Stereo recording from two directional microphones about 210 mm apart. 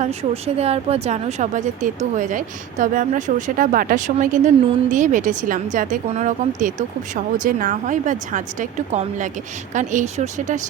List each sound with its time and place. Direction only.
0.0 s speech: 30° right (ahead or behind)